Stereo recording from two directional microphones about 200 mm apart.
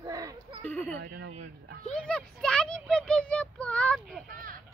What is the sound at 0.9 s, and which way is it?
Speech, 55° right (ahead or behind).